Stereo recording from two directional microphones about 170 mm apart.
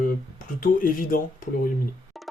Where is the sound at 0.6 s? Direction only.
55° left (ahead or behind).